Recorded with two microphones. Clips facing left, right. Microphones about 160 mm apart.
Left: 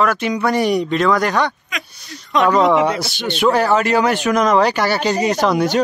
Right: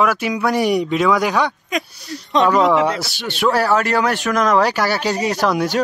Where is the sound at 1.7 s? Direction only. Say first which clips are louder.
Right 7 dB; 40° right (ahead or behind).